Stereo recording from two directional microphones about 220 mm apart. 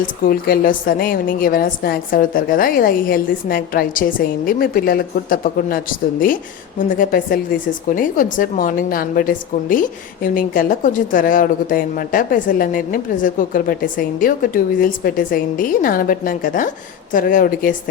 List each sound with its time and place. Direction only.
0.0 s a woman's voice: 40° left (ahead or behind)